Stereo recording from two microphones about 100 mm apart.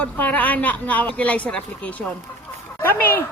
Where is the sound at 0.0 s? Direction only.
15° left (ahead or behind).